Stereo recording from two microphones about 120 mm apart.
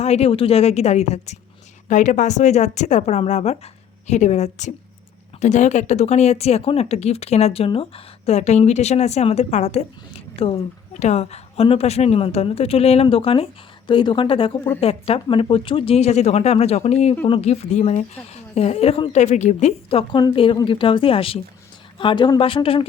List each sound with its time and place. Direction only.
0.0 s speech: 60° left (ahead or behind)
1.9 s speech: 90° left; by 9.8 s 70° left (ahead or behind)
10.3 s a woman's voice: 50° left (ahead or behind)
11.0 s speech: 65° left (ahead or behind)
17.2 s speech: 50° left (ahead or behind)
17.5 s speech: 70° left (ahead or behind); by 19.1 s 50° left (ahead or behind)
19.1 s speech: 75° left (ahead or behind)
19.9 s speech: 50° left (ahead or behind)